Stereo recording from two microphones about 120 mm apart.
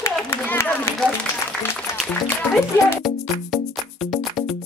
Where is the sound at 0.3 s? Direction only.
15° left (ahead or behind).